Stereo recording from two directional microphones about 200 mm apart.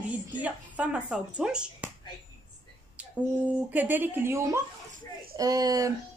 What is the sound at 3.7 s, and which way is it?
A woman's voice, 10° right (ahead or behind).